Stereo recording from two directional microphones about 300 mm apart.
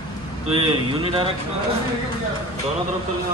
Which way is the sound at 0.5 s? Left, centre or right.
Centre.